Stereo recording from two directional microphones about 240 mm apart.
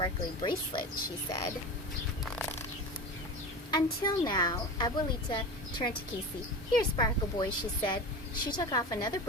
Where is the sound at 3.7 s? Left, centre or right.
Centre.